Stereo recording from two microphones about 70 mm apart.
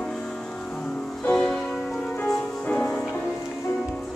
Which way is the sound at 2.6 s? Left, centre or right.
Left.